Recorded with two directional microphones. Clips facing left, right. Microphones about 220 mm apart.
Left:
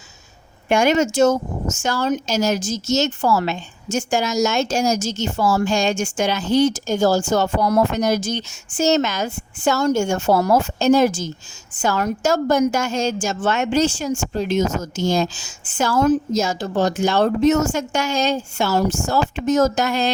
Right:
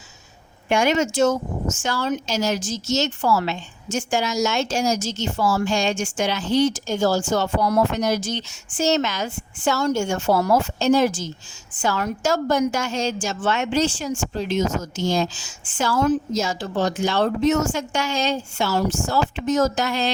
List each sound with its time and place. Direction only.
0.7 s a woman's voice: 45° left (ahead or behind)